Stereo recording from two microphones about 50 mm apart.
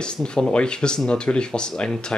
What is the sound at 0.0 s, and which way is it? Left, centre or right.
Speech, centre.